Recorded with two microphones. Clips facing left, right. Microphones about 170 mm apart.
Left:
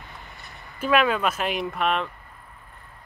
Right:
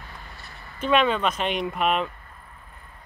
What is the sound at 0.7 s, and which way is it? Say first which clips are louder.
Speech: even; 5° left (ahead or behind).